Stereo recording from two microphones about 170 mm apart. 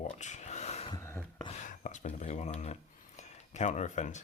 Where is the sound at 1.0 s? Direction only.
15° left (ahead or behind).